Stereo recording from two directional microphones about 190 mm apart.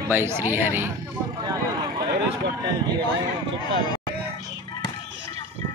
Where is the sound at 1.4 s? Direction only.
25° right (ahead or behind).